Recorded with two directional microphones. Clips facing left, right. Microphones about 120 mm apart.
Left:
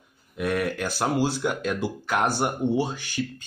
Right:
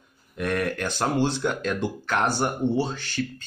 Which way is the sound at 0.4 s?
5° left (ahead or behind).